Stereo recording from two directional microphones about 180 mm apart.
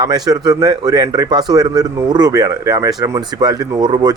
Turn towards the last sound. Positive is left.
turn(degrees=-25)  # may be behind; listen again after turning